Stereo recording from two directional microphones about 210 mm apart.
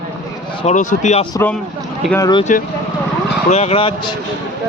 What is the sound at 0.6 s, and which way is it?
Speech, 35° left (ahead or behind).